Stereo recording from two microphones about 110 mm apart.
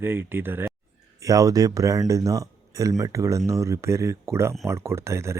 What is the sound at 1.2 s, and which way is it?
Speech, 30° right (ahead or behind).